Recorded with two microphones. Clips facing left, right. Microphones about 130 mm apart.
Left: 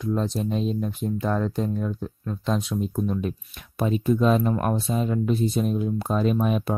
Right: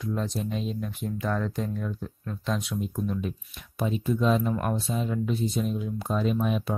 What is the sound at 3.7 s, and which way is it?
Speech, 60° left (ahead or behind).